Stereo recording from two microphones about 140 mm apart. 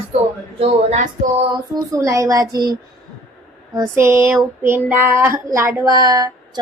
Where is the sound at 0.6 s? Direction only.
50° right (ahead or behind).